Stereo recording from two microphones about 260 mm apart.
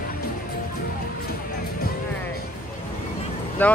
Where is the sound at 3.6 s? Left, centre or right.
Centre.